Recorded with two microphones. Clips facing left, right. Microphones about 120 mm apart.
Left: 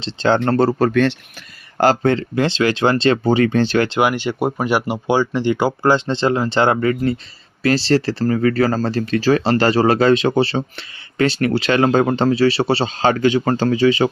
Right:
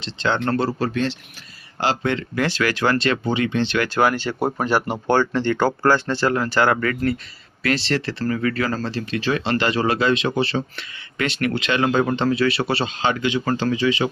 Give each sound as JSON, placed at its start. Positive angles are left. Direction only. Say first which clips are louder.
{"t": 0.0, "sound": "speech", "louder": "left 6 dB", "side_deg": 35}
{"t": 0.9, "sound": "speech", "louder": "left 7 dB", "side_deg": 60}
{"t": 1.8, "sound": "speech", "louder": "left 7 dB", "side_deg": 45}
{"t": 3.8, "sound": "speech", "louder": "left 2 dB", "side_deg": 20}
{"t": 7.6, "sound": "speech", "louder": "left 6 dB", "side_deg": 35}